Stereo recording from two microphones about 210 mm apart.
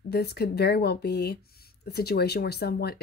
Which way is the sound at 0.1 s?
50° left (ahead or behind).